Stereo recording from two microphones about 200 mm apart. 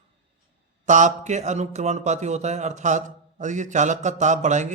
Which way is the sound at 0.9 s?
40° right (ahead or behind).